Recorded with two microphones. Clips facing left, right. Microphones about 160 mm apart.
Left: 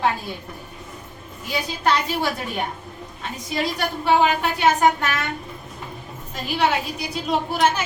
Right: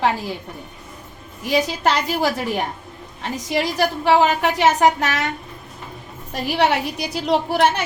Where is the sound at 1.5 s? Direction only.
90° right.